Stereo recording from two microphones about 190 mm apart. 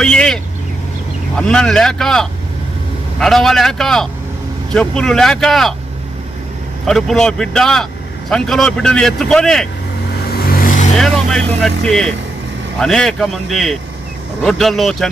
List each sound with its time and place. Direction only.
0.0 s vehicle: 5° left (ahead or behind)
1.3 s speech: 5° left (ahead or behind)
6.9 s speech: centre (ahead or behind)
10.3 s vehicle: 50° left (ahead or behind)
11.0 s speech: centre (ahead or behind)